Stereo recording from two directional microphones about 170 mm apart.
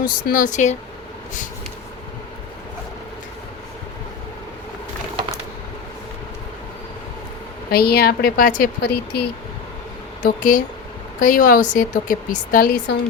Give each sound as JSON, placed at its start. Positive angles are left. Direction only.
{"t": 0.0, "sound": "speech", "side_deg": 55}
{"t": 7.7, "sound": "a woman's voice", "side_deg": 65}
{"t": 10.2, "sound": "speech", "side_deg": 50}